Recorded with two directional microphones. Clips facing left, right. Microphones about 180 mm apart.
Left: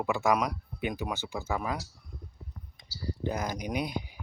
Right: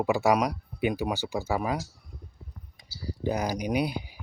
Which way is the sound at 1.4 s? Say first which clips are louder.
Right 3 dB; 10° right (ahead or behind).